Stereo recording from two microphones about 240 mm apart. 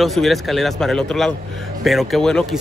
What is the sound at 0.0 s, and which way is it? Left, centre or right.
Speech, centre.